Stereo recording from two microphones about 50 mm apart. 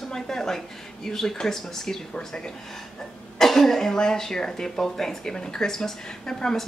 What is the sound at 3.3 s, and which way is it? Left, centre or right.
Speech, centre.